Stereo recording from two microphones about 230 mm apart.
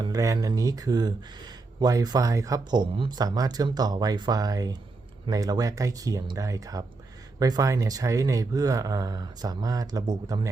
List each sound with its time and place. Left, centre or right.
0.0 s speech: centre